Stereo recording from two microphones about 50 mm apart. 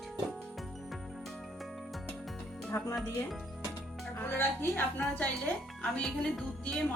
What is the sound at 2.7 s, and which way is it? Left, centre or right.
Speech, left.